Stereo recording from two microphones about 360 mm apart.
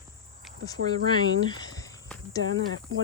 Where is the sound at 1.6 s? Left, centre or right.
Centre.